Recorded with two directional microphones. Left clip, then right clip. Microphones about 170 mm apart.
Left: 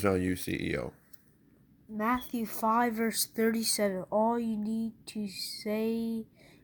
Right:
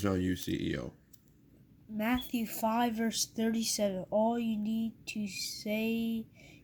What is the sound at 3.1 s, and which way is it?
Speech, centre (ahead or behind).